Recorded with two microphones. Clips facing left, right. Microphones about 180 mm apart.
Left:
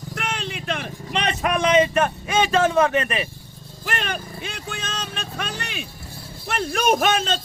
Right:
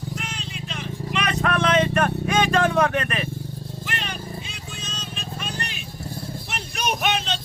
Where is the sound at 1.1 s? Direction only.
25° left (ahead or behind).